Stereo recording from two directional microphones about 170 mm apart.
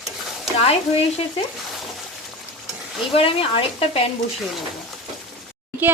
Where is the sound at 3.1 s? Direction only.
30° left (ahead or behind).